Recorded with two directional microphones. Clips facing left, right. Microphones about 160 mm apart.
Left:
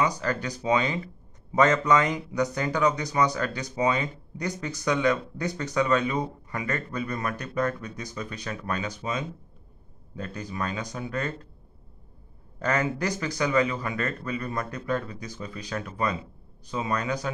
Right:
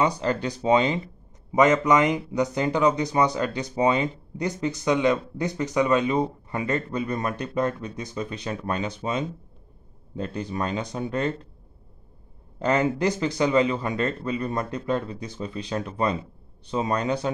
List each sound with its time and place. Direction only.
0.0 s a man's voice: 25° right (ahead or behind)
12.5 s a man's voice: 25° right (ahead or behind)